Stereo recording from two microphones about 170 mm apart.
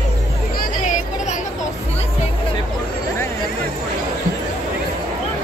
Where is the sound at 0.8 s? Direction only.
45° left (ahead or behind).